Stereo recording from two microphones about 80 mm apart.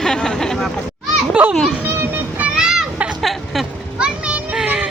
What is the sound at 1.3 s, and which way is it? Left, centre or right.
Children playing, centre.